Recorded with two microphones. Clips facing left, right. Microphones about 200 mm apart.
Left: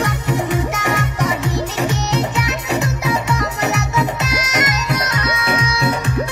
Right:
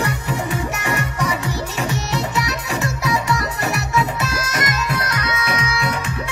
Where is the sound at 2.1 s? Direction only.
20° left (ahead or behind).